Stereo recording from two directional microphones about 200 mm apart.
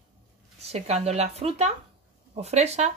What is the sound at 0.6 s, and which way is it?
Speech, 30° right (ahead or behind).